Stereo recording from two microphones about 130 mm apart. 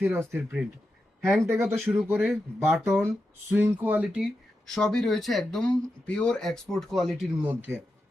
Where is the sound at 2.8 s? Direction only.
20° right (ahead or behind).